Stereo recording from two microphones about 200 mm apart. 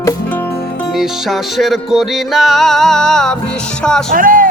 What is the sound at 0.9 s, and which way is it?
Music, centre (ahead or behind).